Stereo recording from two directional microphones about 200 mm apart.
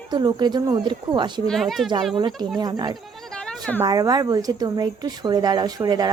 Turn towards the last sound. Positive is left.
turn(degrees=-20)  # may be behind; listen again after turning